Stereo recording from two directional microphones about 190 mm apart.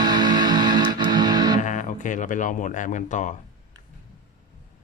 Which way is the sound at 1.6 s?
45° left (ahead or behind).